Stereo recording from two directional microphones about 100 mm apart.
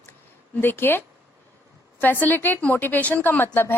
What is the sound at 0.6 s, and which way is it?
Speech, 20° left (ahead or behind).